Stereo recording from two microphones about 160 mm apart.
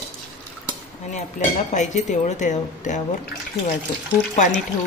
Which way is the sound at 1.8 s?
50° left (ahead or behind).